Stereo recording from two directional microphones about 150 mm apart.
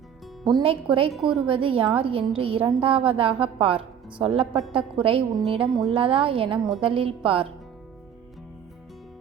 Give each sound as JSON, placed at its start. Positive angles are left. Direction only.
{"t": 0.4, "sound": "a woman's voice", "side_deg": -35}
{"t": 1.1, "sound": "a woman's voice", "side_deg": -5}
{"t": 1.5, "sound": "a woman's voice", "side_deg": -35}